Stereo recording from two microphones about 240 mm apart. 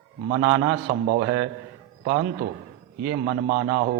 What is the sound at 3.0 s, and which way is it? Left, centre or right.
Speech, right.